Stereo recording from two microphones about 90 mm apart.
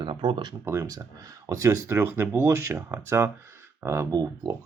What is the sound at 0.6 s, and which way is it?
Speech, 30° right (ahead or behind).